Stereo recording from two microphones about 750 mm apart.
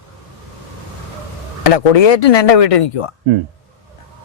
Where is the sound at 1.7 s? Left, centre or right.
Left.